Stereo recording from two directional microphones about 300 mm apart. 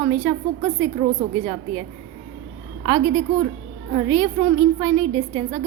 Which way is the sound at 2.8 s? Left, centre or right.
Centre.